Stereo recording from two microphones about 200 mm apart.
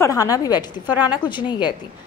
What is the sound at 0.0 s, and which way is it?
A woman's voice, 15° left (ahead or behind).